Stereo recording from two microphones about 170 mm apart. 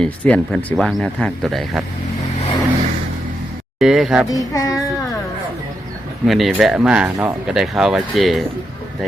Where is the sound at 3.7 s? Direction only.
5° right (ahead or behind).